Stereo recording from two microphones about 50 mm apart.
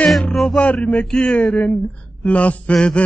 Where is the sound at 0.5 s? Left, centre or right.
Left.